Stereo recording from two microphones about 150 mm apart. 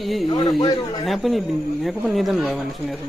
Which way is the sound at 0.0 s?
Centre (ahead or behind).